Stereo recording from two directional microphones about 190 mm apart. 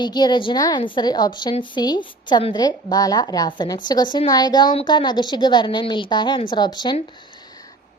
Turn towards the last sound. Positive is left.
turn(degrees=25)  # may be behind; listen again after turning